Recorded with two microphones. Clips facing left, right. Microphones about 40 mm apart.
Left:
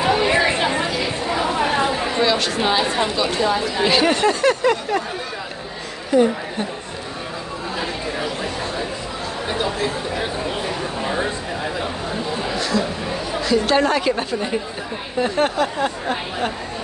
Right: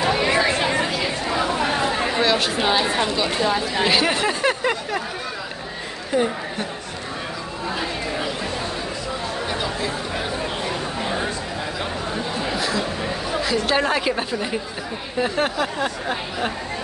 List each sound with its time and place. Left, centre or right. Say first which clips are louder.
0.0 s chatter: left 2 dB; centre
2.1 s speech: left 2 dB; centre
6.1 s a woman's voice: left 5 dB; right
12.5 s chatter: left 3 dB; centre
13.4 s speech: left 4 dB; centre